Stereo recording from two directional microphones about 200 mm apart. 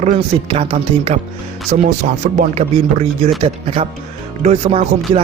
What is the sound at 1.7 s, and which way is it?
Speech, 45° right (ahead or behind).